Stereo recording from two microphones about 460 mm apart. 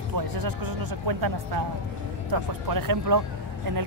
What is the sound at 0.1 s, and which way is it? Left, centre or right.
Speech, right.